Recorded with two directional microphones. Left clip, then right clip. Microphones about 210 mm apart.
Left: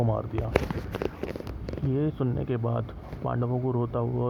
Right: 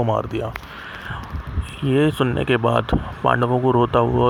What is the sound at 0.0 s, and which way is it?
Speech, 55° right (ahead or behind).